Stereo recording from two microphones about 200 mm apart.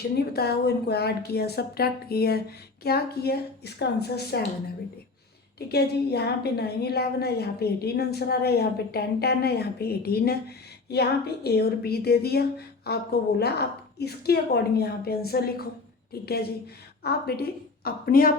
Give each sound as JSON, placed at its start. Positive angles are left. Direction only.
{"t": 0.2, "sound": "a woman's voice", "side_deg": 55}
{"t": 5.5, "sound": "a woman's voice", "side_deg": 55}